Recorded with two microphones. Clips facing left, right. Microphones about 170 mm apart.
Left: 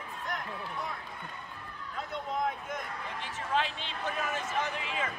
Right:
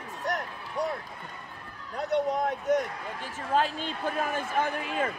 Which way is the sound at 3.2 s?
45° right (ahead or behind).